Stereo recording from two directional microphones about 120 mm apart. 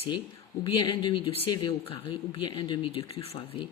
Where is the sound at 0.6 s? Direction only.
40° left (ahead or behind).